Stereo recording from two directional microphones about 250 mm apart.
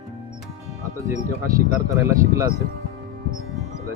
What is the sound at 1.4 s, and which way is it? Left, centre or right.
Speech, centre.